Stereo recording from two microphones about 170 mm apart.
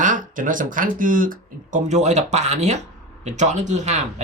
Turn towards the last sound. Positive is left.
turn(degrees=-45)  # may be behind; listen again after turning